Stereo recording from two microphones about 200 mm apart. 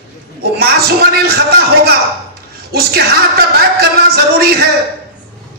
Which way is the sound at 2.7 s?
50° right (ahead or behind).